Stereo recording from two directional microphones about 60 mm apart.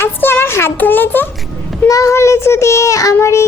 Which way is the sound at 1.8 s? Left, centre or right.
Left.